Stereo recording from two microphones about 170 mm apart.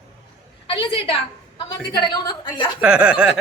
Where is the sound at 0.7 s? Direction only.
30° left (ahead or behind).